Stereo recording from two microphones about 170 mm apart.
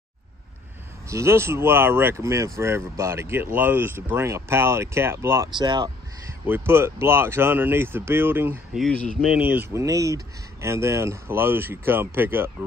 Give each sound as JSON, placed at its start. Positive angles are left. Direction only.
{"t": 1.0, "sound": "speech", "side_deg": -15}
{"t": 6.4, "sound": "speech", "side_deg": -15}
{"t": 8.7, "sound": "speech", "side_deg": 5}
{"t": 9.4, "sound": "speech", "side_deg": -10}